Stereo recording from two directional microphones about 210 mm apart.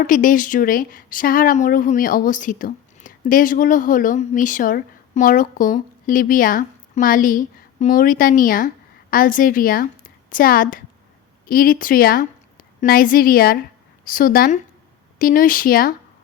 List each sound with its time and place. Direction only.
0.0 s a woman's voice: 40° left (ahead or behind)